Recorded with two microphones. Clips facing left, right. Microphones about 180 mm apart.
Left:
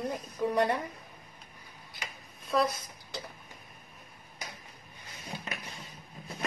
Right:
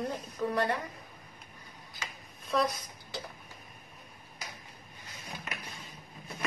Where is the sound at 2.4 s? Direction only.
Centre (ahead or behind).